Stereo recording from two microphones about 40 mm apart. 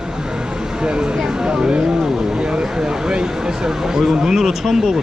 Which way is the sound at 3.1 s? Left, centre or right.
Centre.